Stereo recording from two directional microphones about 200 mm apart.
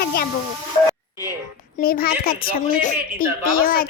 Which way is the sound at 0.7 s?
30° left (ahead or behind).